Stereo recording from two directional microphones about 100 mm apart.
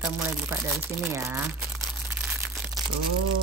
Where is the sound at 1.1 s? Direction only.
30° right (ahead or behind).